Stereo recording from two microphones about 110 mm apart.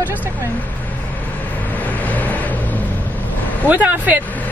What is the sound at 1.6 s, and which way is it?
Vehicle, 15° left (ahead or behind).